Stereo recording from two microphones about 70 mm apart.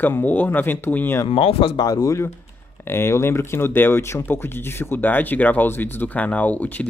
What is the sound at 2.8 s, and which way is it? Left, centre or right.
Speech, left.